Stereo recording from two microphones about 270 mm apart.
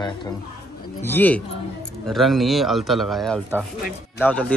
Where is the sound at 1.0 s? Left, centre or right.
Centre.